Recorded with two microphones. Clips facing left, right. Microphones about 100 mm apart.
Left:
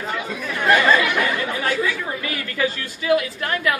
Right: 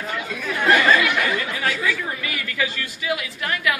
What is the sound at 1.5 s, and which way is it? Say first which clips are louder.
A woman's voice: left 2 dB; 30° left (ahead or behind).